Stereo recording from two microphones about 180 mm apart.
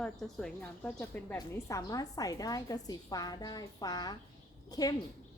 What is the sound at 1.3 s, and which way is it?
A woman's voice, 20° left (ahead or behind).